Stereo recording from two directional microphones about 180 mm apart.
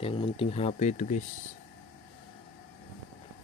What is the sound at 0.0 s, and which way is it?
Speech, 35° left (ahead or behind).